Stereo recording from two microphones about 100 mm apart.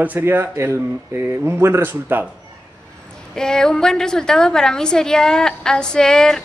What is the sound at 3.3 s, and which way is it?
A woman's voice, 5° left (ahead or behind).